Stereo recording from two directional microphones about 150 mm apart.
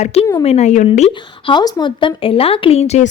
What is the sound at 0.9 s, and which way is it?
Speech, 40° left (ahead or behind).